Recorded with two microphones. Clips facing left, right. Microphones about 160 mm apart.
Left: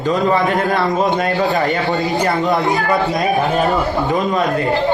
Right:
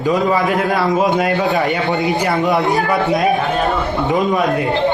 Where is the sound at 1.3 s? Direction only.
15° right (ahead or behind).